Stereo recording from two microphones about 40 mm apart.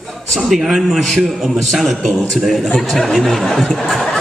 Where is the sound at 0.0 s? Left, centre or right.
Centre.